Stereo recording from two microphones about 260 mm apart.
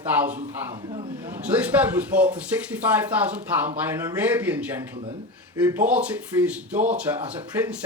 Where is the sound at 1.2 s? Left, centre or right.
Centre.